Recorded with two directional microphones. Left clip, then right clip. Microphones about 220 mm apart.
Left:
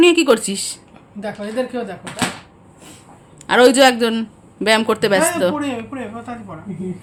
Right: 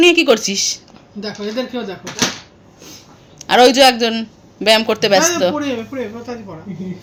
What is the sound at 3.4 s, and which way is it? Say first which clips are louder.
A man's voice: right 2 dB; 5° left (ahead or behind).